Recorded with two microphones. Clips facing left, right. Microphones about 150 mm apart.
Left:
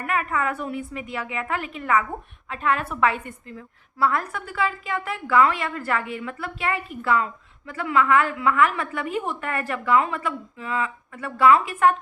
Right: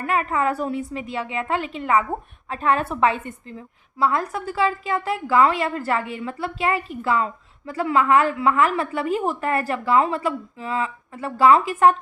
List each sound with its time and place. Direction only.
0.0 s a woman's voice: 30° right (ahead or behind)